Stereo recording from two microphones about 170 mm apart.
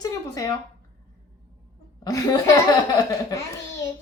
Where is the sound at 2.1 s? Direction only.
20° left (ahead or behind).